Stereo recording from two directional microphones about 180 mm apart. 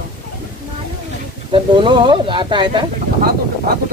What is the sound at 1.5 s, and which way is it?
Speech, 25° right (ahead or behind).